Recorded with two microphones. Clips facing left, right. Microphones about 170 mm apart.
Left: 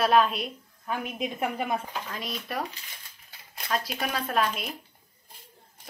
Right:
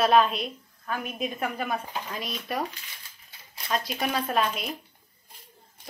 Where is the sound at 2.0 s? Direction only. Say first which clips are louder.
Right 1 dB; 5° right (ahead or behind).